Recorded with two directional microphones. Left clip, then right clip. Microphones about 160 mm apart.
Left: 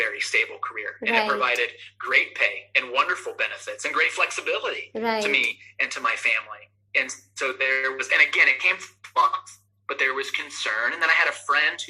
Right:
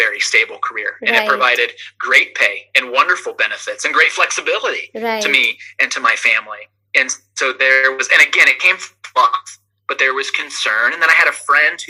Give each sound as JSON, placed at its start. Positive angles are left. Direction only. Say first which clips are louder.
{"t": 0.0, "sound": "speech", "louder": "right 9 dB", "side_deg": -40}
{"t": 4.9, "sound": "speech", "louder": "right 2 dB", "side_deg": -20}
{"t": 5.2, "sound": "speech", "louder": "right 12 dB", "side_deg": -40}